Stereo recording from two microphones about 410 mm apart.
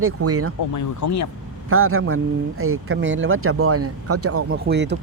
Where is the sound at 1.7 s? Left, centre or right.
Right.